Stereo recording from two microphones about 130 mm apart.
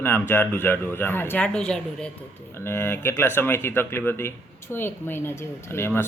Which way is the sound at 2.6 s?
20° left (ahead or behind).